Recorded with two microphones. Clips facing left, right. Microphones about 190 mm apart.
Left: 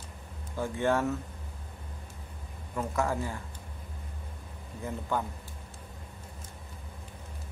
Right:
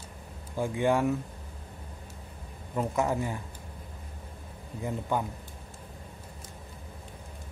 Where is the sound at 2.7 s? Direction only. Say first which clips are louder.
Right 2 dB; 20° right (ahead or behind).